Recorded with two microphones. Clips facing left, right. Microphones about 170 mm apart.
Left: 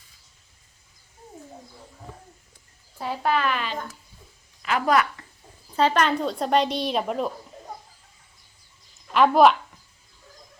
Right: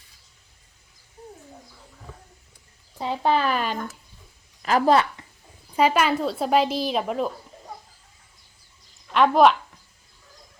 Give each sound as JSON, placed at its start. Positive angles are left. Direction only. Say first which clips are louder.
{"t": 3.0, "sound": "a woman's voice", "louder": "right 2 dB", "side_deg": -25}
{"t": 5.7, "sound": "speech", "louder": "right 1 dB", "side_deg": -10}
{"t": 9.1, "sound": "speech", "louder": "even", "side_deg": 0}